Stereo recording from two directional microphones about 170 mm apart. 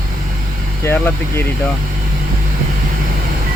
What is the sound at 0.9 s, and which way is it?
Speech, 15° left (ahead or behind).